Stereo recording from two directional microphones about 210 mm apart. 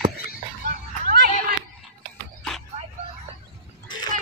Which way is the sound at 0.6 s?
45° right (ahead or behind).